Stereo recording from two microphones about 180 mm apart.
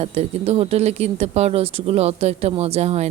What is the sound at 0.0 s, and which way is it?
Speech, 35° right (ahead or behind).